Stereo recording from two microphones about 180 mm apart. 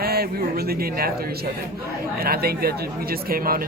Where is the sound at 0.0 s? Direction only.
60° right (ahead or behind).